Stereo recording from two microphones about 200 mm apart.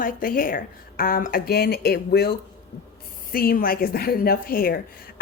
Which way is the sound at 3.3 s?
45° left (ahead or behind).